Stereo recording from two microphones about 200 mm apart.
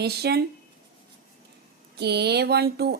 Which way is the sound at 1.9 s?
55° right (ahead or behind).